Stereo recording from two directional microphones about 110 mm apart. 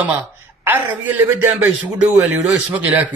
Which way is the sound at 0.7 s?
15° right (ahead or behind).